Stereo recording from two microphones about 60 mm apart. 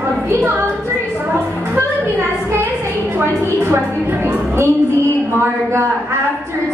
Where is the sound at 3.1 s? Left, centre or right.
Right.